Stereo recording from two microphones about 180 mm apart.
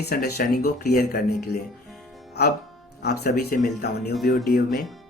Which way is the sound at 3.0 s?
60° left (ahead or behind).